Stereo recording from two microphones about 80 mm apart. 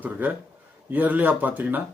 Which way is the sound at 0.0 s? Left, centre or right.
Right.